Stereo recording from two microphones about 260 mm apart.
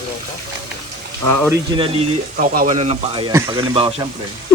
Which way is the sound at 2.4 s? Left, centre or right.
Right.